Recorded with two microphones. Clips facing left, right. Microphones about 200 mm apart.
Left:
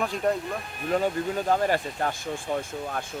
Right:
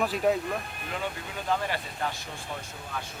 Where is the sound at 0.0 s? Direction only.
5° right (ahead or behind).